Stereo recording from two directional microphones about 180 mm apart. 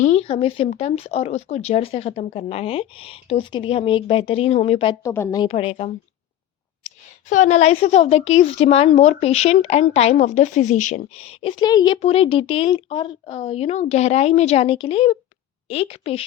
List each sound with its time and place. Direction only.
0.0 s a woman's voice: 35° left (ahead or behind)
5.0 s a woman's voice: 15° left (ahead or behind)
5.5 s a woman's voice: 30° left (ahead or behind)
11.9 s a woman's voice: 35° left (ahead or behind)